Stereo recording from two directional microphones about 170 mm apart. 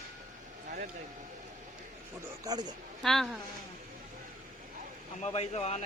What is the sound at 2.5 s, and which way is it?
Speech, 25° right (ahead or behind).